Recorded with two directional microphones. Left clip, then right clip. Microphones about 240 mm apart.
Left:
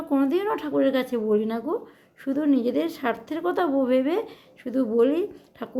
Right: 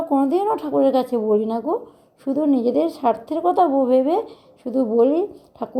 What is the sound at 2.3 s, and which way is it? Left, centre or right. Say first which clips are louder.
A woman's voice: right 4 dB; centre.